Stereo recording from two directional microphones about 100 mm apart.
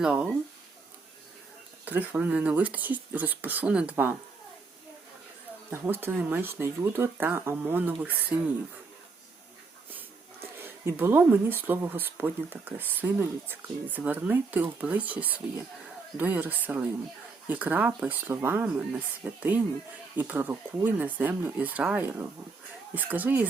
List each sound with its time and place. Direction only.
0.0 s speech: 10° right (ahead or behind)
1.8 s speech: 15° right (ahead or behind)
5.8 s speech: 20° right (ahead or behind)
10.6 s speech: 20° right (ahead or behind)